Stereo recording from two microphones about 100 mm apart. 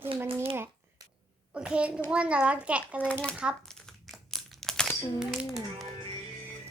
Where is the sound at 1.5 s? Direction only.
10° right (ahead or behind).